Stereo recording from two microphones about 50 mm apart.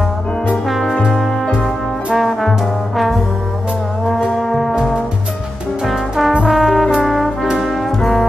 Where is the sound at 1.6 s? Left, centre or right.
Centre.